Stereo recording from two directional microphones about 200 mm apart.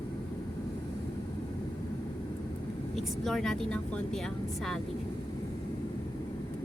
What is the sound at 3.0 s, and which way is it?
Speech, centre (ahead or behind).